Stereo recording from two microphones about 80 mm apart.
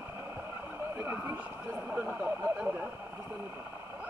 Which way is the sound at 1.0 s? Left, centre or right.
Right.